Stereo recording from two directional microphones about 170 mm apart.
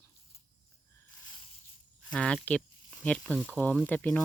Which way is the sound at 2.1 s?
5° left (ahead or behind).